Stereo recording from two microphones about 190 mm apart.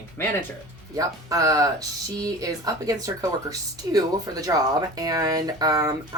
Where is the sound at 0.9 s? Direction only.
20° right (ahead or behind).